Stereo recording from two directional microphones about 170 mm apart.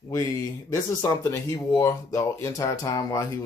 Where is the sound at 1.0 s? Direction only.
20° left (ahead or behind).